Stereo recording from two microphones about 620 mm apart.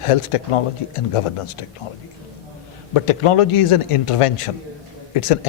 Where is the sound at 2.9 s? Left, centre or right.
Left.